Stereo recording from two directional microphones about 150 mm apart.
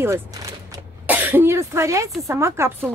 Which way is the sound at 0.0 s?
20° right (ahead or behind).